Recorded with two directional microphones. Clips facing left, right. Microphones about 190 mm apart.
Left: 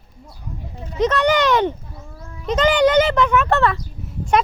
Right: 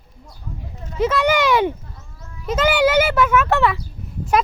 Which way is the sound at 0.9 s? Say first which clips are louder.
Left 1 dB; 10° right (ahead or behind).